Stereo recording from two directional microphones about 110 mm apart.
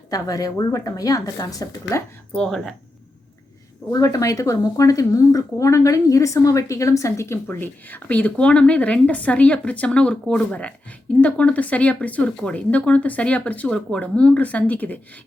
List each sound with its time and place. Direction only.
0.1 s a woman's voice: 35° left (ahead or behind)
2.3 s speech: 5° left (ahead or behind)
3.9 s a woman's voice: 30° left (ahead or behind)
7.4 s speech: 15° left (ahead or behind)